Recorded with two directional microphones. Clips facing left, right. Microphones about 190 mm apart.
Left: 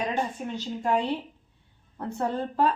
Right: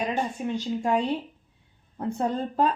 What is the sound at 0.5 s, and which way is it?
Speech, 15° right (ahead or behind).